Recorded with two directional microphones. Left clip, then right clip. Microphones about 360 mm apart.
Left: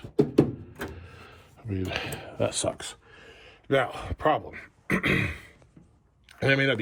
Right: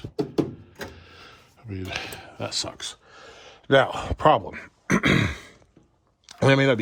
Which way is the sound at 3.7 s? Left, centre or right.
Right.